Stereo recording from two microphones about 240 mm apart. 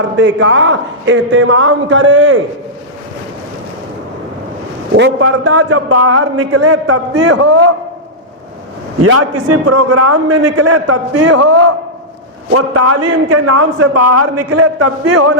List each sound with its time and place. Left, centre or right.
0.2 s a man's voice: right
4.9 s a man's voice: right
5.5 s a man's voice: right
9.0 s a man's voice: right
13.1 s a man's voice: right